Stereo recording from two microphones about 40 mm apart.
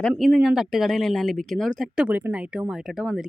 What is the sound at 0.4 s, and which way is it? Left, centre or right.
Speech, centre.